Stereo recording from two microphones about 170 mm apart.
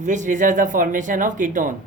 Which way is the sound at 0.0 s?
45° right (ahead or behind).